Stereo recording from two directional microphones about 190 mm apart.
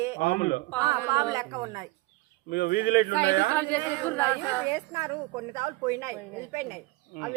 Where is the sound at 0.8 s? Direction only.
20° right (ahead or behind).